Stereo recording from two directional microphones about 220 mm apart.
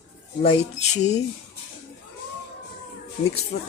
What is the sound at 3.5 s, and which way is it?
Speech, 30° left (ahead or behind).